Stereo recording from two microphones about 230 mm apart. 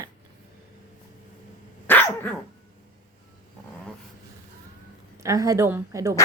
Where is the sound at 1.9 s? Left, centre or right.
Centre.